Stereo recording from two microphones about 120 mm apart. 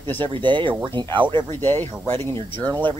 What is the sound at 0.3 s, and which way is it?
Speech, 40° right (ahead or behind).